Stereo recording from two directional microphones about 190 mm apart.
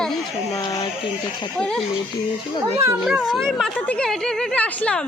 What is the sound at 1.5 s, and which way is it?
Speech, 5° left (ahead or behind).